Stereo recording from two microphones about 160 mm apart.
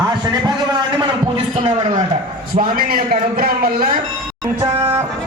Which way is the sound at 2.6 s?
65° right (ahead or behind).